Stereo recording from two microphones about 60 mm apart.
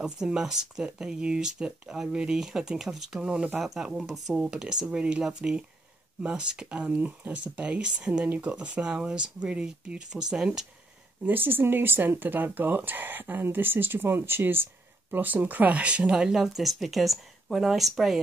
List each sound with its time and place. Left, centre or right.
0.0 s speech: centre
11.2 s speech: right
16.2 s speech: centre